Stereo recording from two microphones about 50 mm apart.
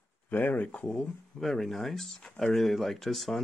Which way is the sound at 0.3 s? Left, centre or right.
Left.